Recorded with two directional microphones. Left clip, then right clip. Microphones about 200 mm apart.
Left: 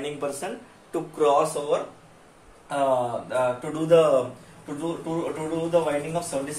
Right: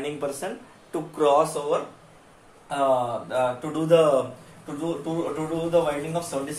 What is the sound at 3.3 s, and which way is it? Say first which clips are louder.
A man's voice: even; 15° right (ahead or behind).